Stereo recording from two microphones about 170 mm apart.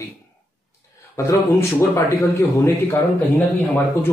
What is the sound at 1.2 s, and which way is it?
A man's voice, 15° left (ahead or behind).